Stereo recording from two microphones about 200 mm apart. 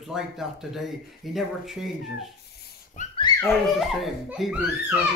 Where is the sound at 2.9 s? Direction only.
40° left (ahead or behind).